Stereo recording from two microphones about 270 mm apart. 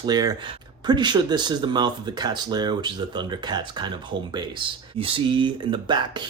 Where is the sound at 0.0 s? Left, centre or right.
Centre.